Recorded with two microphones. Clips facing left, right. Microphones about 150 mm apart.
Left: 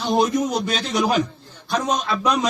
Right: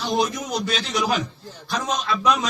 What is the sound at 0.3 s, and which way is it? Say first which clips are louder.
A man's voice: left 5 dB; 55° left (ahead or behind).